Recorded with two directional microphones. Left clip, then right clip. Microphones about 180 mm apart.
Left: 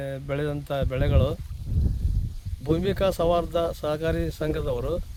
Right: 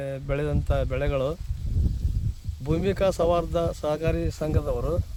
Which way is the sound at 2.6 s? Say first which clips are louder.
Even; 5° left (ahead or behind).